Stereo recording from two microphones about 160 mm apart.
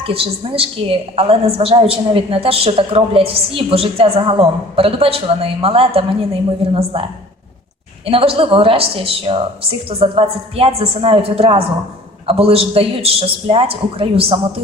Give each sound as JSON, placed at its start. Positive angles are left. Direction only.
{"t": 0.0, "sound": "a woman's voice", "side_deg": -35}
{"t": 8.0, "sound": "a woman's voice", "side_deg": -35}